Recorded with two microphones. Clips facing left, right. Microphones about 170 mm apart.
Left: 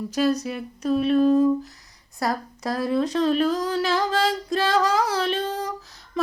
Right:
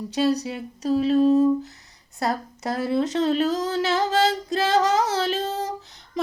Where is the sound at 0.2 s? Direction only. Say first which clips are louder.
Even; 30° right (ahead or behind).